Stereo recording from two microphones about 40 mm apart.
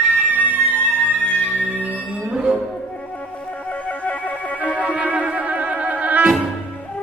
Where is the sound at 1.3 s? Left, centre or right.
Left.